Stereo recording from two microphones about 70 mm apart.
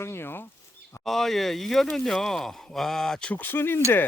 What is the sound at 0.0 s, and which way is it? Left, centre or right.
Speech, left.